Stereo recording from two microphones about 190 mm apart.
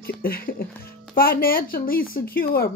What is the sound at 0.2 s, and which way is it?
Speech, 50° left (ahead or behind).